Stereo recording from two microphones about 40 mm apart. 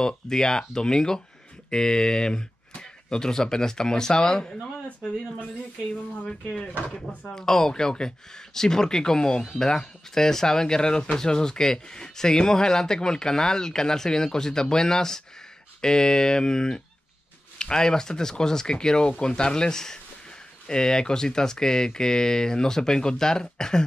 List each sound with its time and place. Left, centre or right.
0.0 s speech: centre
7.3 s speech: centre